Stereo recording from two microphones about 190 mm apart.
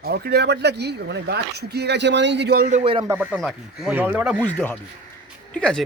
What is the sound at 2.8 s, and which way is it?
Speech, 30° right (ahead or behind).